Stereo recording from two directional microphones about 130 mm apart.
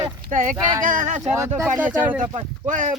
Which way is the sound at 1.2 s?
20° right (ahead or behind).